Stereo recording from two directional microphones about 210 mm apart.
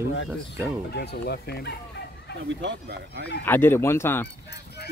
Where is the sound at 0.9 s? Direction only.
50° left (ahead or behind).